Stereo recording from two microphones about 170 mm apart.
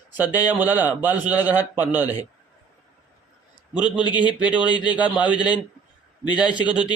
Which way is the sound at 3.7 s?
5° right (ahead or behind).